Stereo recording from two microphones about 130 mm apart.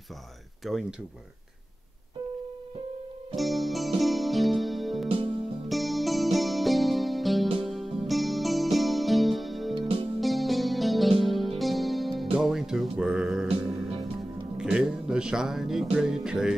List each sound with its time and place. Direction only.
0.7 s speech: centre (ahead or behind)
3.3 s music: centre (ahead or behind)
5.0 s music: 45° right (ahead or behind)
5.7 s music: centre (ahead or behind)
14.6 s speech: 5° right (ahead or behind)